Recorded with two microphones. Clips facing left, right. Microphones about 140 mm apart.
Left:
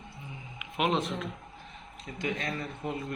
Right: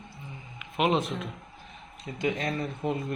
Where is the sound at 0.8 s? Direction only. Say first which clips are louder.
Right 3 dB; 5° right (ahead or behind).